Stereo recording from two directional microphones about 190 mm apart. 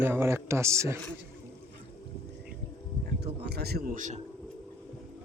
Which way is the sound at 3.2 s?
60° right (ahead or behind).